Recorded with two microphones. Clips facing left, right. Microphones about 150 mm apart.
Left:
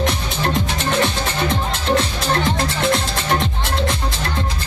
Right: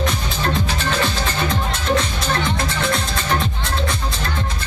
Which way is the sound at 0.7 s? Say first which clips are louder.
Left 2 dB; 20° left (ahead or behind).